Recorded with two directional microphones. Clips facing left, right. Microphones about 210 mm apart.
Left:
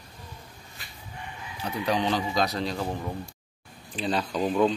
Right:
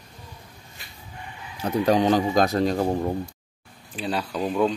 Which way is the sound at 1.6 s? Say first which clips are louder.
Right 7 dB; 45° right (ahead or behind).